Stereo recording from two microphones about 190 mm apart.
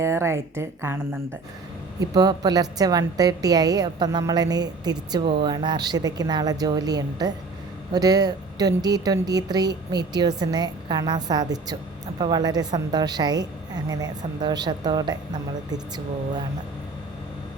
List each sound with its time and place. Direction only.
0.0 s a woman's voice: 15° right (ahead or behind)